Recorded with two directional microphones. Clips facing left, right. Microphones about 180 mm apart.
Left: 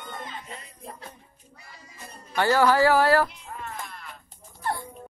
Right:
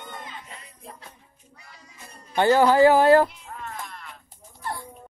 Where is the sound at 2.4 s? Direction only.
20° right (ahead or behind).